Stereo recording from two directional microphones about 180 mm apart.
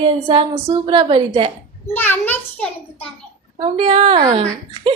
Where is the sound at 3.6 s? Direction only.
35° right (ahead or behind).